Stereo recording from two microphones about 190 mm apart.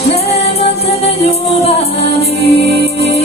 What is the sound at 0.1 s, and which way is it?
Music, 35° left (ahead or behind).